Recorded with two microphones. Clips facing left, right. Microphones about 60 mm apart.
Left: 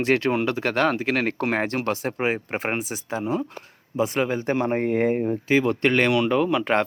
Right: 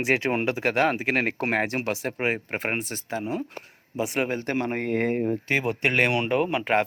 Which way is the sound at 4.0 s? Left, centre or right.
Centre.